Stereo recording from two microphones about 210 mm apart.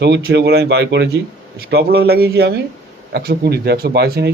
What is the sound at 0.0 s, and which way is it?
Speech, 55° right (ahead or behind).